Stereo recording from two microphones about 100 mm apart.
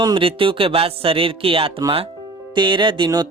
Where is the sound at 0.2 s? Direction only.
65° right (ahead or behind).